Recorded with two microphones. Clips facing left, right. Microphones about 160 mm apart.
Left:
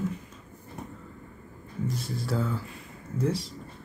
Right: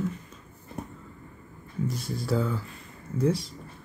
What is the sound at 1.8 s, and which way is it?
Speech, centre (ahead or behind).